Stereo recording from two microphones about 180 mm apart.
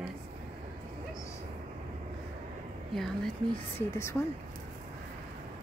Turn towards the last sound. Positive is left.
turn(degrees=15)  # may be behind; listen again after turning